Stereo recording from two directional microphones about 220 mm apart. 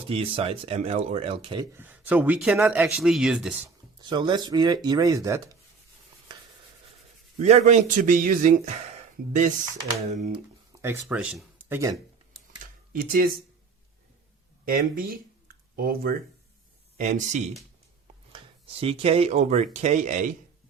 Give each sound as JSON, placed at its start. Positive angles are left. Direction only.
{"t": 0.1, "sound": "speech", "side_deg": -25}
{"t": 1.7, "sound": "speech", "side_deg": -10}
{"t": 3.9, "sound": "speech", "side_deg": -20}
{"t": 7.3, "sound": "speech", "side_deg": -30}
{"t": 10.7, "sound": "speech", "side_deg": -10}
{"t": 12.9, "sound": "speech", "side_deg": -40}
{"t": 14.6, "sound": "speech", "side_deg": -40}
{"t": 18.8, "sound": "speech", "side_deg": -25}